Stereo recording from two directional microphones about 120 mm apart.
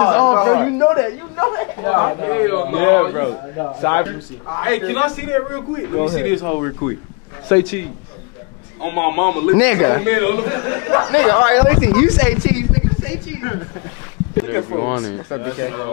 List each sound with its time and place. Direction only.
0.0 s a man's voice: 20° left (ahead or behind)
8.8 s a man's voice: 20° left (ahead or behind)